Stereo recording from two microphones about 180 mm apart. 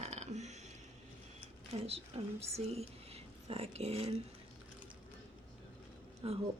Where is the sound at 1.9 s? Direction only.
35° right (ahead or behind).